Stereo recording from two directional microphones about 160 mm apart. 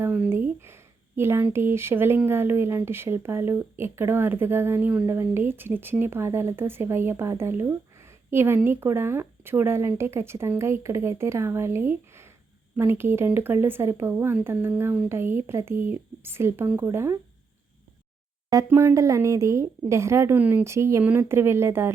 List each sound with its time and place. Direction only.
0.0 s speech: 10° right (ahead or behind)
18.5 s speech: 15° right (ahead or behind)